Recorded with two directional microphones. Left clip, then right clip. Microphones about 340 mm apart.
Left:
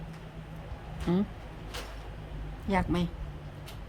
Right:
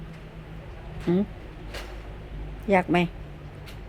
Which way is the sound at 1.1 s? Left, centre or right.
Centre.